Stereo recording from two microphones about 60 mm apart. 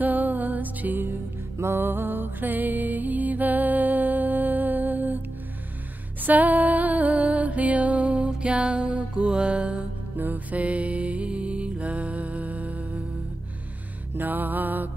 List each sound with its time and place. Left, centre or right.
0.0 s music: right
1.0 s music: right
1.9 s music: right
6.2 s music: right
11.2 s music: centre
11.8 s music: right
14.1 s music: right